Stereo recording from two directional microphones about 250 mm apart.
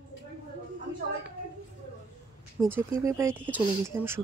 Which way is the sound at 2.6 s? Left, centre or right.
Centre.